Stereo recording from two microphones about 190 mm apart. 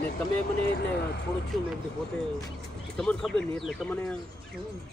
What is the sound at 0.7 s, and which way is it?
Speech, 60° left (ahead or behind).